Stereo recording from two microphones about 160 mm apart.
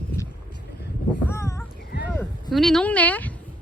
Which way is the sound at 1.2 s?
15° left (ahead or behind).